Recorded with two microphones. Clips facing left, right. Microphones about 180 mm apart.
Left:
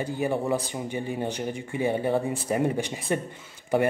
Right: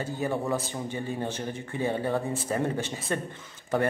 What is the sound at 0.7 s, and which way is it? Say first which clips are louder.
A man's voice: left 2 dB; 15° left (ahead or behind).